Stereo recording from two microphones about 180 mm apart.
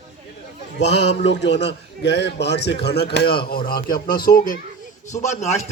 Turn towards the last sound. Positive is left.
turn(degrees=40)  # may be behind; listen again after turning